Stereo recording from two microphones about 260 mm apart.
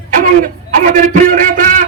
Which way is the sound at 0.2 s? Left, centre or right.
Right.